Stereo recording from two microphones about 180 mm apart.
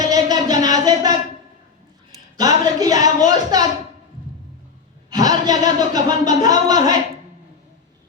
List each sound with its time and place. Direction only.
0.0 s a sound: 20° right (ahead or behind)
2.4 s speech: 20° right (ahead or behind)
5.1 s speech: 20° right (ahead or behind)